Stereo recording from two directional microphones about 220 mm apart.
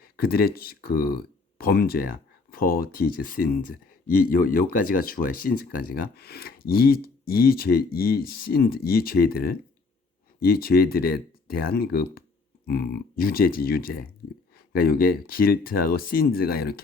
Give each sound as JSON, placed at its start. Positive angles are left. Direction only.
{"t": 0.0, "sound": "speech", "side_deg": 45}